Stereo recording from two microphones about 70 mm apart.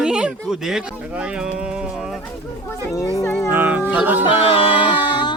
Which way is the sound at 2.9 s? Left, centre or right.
Left.